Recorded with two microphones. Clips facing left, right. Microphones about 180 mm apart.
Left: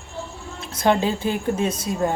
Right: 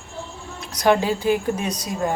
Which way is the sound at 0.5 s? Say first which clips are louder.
Right 1 dB; 25° left (ahead or behind).